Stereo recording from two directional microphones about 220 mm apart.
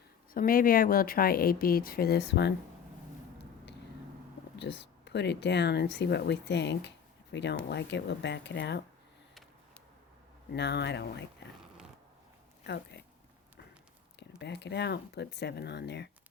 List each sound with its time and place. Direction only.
0.3 s speech: 40° left (ahead or behind)
4.5 s speech: 50° left (ahead or behind)
10.5 s speech: 50° left (ahead or behind)
12.6 s speech: 50° left (ahead or behind)
14.2 s speech: 50° left (ahead or behind)